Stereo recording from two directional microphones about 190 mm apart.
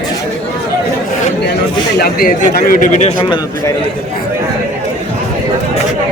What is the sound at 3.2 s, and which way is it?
Speech, 20° left (ahead or behind).